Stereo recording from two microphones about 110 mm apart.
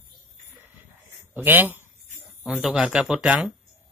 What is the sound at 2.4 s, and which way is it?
Speech, centre (ahead or behind).